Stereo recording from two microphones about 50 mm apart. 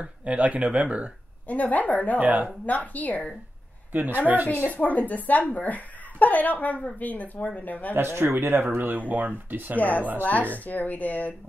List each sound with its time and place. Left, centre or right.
0.0 s speech: right
1.5 s speech: left
2.1 s speech: right
2.6 s speech: left
3.9 s speech: right
4.5 s speech: left
7.9 s speech: right
9.8 s speech: left